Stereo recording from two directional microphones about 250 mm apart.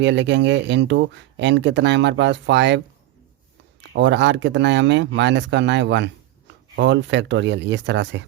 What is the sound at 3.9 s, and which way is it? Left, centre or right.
Speech, right.